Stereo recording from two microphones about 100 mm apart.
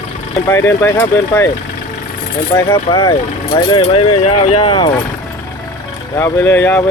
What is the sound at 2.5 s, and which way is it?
Speech, 45° left (ahead or behind).